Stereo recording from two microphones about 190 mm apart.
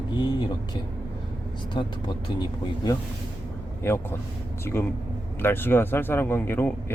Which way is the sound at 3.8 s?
10° left (ahead or behind).